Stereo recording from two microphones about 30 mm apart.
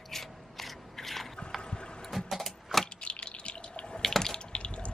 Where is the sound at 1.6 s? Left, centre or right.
Left.